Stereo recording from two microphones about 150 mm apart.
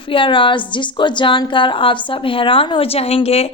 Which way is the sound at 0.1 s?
35° left (ahead or behind).